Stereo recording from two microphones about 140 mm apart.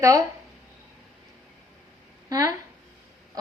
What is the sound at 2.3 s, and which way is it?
Speech, 25° right (ahead or behind).